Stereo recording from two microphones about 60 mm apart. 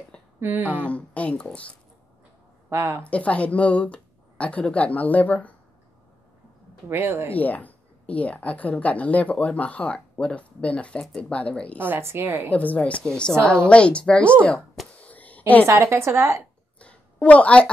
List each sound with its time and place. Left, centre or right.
0.4 s a woman's voice: right
0.7 s speech: left
2.7 s a woman's voice: right
3.0 s speech: left
6.9 s a woman's voice: right
7.3 s speech: left
11.8 s a woman's voice: right
12.5 s a woman's voice: left
15.0 s a sound: left
15.6 s a woman's voice: right
16.8 s a sound: left